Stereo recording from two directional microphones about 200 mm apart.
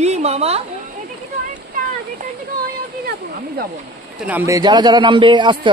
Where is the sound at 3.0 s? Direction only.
50° right (ahead or behind).